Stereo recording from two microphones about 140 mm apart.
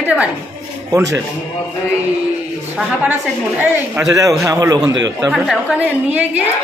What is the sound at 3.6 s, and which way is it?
A man's voice, 15° right (ahead or behind).